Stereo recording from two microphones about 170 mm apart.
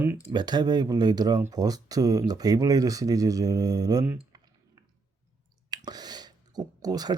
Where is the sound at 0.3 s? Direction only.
25° right (ahead or behind).